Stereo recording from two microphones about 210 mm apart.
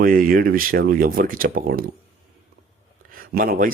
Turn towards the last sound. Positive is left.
turn(degrees=-40)  # may be behind; listen again after turning